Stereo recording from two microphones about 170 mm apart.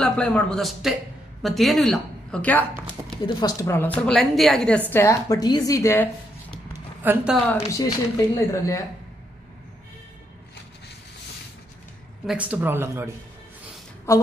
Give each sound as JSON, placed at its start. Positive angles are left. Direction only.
{"t": 0.0, "sound": "a man's voice", "side_deg": 5}
{"t": 3.3, "sound": "a woman's voice", "side_deg": 25}
{"t": 7.0, "sound": "speech", "side_deg": -10}
{"t": 7.4, "sound": "a woman's voice", "side_deg": 15}
{"t": 12.3, "sound": "speech", "side_deg": -10}